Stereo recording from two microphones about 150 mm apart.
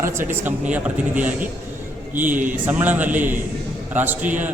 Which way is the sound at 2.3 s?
60° right (ahead or behind).